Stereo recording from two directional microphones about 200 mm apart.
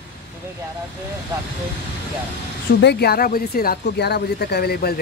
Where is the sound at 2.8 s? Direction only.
55° left (ahead or behind).